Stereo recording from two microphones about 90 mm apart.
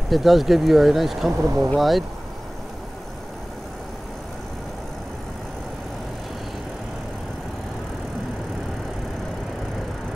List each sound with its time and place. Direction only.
0.1 s speech: centre (ahead or behind)
1.3 s speech: 30° right (ahead or behind)
1.8 s speech: centre (ahead or behind)